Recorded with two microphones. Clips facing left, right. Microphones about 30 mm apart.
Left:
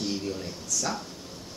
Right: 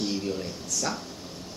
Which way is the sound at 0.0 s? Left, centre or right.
Centre.